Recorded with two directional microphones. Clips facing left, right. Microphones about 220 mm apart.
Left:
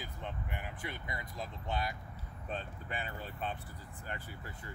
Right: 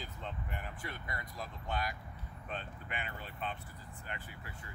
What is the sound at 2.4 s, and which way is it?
Speech, 35° left (ahead or behind).